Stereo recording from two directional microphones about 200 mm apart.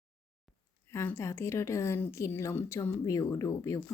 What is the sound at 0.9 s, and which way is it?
A woman's voice, 15° left (ahead or behind).